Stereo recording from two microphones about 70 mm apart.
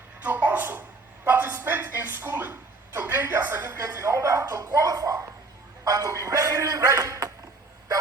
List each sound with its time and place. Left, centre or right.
0.3 s a man's voice: right
4.0 s a man's voice: right